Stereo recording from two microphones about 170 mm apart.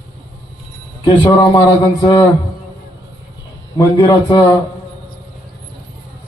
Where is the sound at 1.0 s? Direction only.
25° left (ahead or behind).